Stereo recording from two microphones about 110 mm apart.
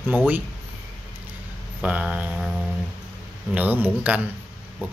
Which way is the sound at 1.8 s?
10° right (ahead or behind).